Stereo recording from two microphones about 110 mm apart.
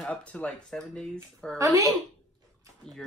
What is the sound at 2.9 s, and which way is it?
Speech, 5° left (ahead or behind).